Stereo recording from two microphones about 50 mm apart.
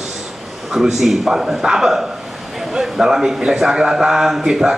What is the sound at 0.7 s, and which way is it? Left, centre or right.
A man's voice, centre.